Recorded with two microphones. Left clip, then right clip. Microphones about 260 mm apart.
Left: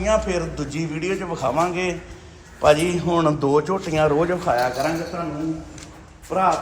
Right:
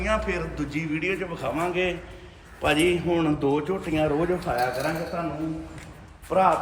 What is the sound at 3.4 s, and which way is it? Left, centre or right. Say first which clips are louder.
Speech: left 6 dB; left.